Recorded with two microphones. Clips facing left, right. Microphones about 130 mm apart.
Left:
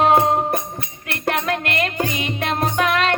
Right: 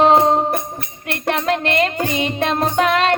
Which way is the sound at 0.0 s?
25° right (ahead or behind).